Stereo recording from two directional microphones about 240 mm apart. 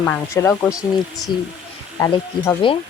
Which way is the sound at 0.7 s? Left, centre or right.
Centre.